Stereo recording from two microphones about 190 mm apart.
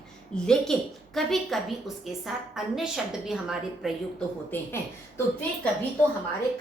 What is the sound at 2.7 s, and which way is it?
A woman's voice, 5° right (ahead or behind).